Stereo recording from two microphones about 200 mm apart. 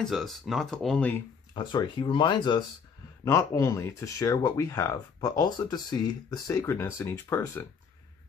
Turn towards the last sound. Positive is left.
turn(degrees=15)  # may be behind; listen again after turning